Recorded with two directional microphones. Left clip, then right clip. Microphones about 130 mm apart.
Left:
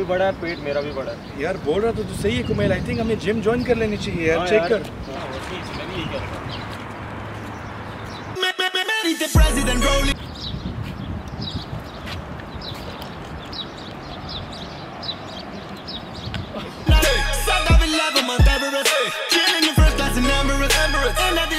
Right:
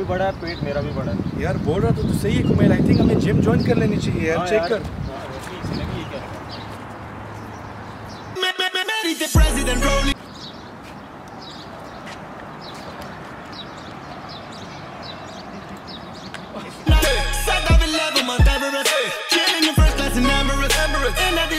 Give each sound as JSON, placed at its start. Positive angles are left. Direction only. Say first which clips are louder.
{"t": 0.1, "sound": "speech", "louder": "left 3 dB", "side_deg": 0}
{"t": 8.4, "sound": "music", "louder": "even", "side_deg": 0}
{"t": 16.5, "sound": "music", "louder": "left 1 dB", "side_deg": 0}